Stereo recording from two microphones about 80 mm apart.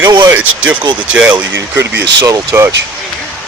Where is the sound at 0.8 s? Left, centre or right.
Right.